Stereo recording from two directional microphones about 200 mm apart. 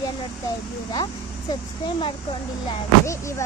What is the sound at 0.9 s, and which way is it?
A child's voice, 20° left (ahead or behind).